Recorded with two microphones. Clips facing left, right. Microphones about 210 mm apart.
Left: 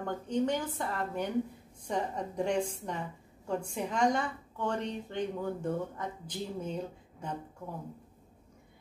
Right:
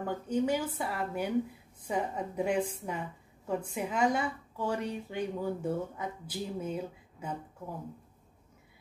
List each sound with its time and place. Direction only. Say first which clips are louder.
0.0 s a woman's voice: right 1 dB; 5° right (ahead or behind)